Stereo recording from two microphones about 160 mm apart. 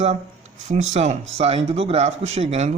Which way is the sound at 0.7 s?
45° right (ahead or behind).